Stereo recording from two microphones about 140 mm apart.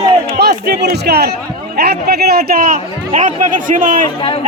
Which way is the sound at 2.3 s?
90° right.